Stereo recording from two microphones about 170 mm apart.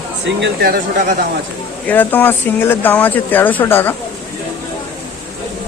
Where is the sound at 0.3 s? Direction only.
80° right.